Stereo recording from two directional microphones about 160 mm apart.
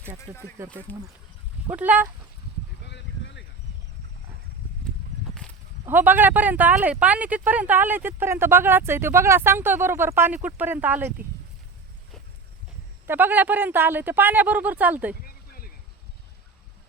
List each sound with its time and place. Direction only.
0.3 s speech: 15° right (ahead or behind)
0.9 s speech: 10° left (ahead or behind)
1.6 s speech: 10° right (ahead or behind)
2.8 s a sound: 90° left
5.8 s speech: 10° right (ahead or behind)
13.1 s speech: 10° right (ahead or behind)
15.2 s a sound: 65° left (ahead or behind)